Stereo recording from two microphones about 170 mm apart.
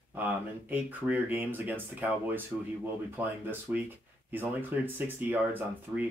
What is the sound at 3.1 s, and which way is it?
Speech, 10° right (ahead or behind).